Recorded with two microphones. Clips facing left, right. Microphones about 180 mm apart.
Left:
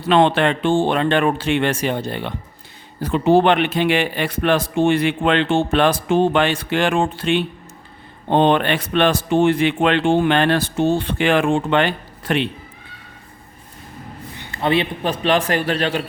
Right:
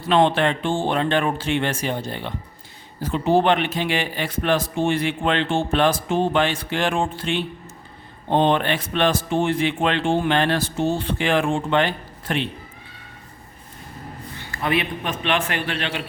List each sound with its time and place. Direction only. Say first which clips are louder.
0.0 s a man's voice: left 3 dB; 70° left (ahead or behind)
14.3 s a man's voice: left 4 dB; 25° left (ahead or behind)